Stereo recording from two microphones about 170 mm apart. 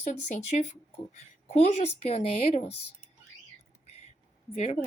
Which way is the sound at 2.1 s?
35° left (ahead or behind).